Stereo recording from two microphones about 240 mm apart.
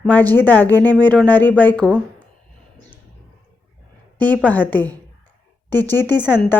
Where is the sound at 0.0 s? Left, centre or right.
Centre.